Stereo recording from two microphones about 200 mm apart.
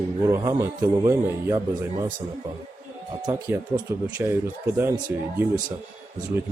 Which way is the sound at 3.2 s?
20° right (ahead or behind).